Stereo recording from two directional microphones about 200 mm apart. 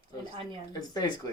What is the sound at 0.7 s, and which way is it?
Speech, 20° left (ahead or behind).